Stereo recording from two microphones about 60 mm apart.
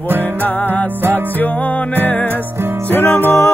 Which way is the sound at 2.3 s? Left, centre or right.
Right.